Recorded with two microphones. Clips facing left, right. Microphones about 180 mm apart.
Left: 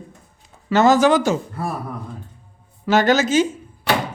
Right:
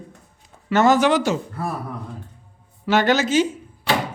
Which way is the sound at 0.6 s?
35° left (ahead or behind).